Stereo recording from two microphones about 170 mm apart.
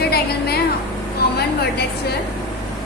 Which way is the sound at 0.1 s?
70° left (ahead or behind).